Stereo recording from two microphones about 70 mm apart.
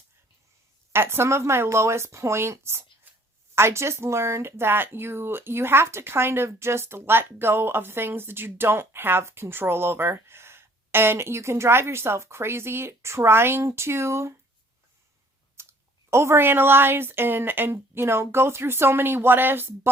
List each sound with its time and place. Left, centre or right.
0.9 s speech: right
15.6 s clicking: right
16.0 s speech: right